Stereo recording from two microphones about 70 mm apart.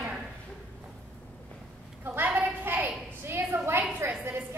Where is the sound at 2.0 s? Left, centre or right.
Right.